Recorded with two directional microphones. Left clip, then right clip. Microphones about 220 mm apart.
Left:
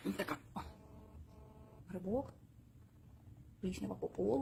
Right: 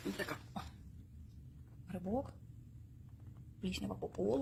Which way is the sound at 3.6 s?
Centre (ahead or behind).